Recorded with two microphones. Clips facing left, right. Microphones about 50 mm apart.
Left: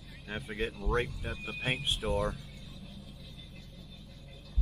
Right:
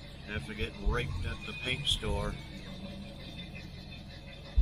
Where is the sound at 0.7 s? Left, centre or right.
Right.